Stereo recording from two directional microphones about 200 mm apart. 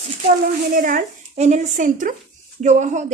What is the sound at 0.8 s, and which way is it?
A woman's voice, 45° right (ahead or behind).